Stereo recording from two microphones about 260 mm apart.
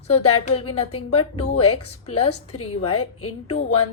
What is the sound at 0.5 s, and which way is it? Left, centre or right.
Speech, left.